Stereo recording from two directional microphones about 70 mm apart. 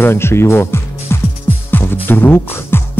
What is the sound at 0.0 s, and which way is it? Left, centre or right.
A man's voice, left.